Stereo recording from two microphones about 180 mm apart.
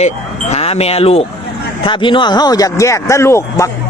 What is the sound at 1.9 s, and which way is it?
Speech, 25° left (ahead or behind).